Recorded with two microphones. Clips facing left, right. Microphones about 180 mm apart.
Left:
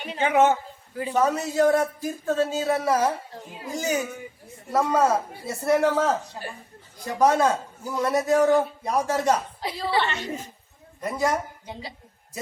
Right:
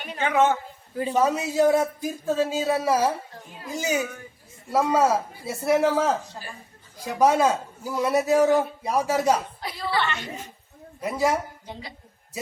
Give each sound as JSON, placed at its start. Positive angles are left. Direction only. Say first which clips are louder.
{"t": 0.0, "sound": "a man's voice", "louder": "left 2 dB", "side_deg": 20}
{"t": 1.1, "sound": "a man's voice", "louder": "even", "side_deg": -10}
{"t": 9.6, "sound": "a woman's voice", "louder": "left 2 dB", "side_deg": 30}
{"t": 11.0, "sound": "a man's voice", "louder": "right 1 dB", "side_deg": -5}